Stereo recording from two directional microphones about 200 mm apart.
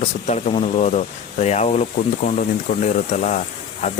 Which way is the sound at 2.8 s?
35° left (ahead or behind).